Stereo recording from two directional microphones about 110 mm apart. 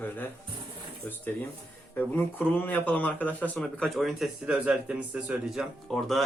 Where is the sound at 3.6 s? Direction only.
5° left (ahead or behind).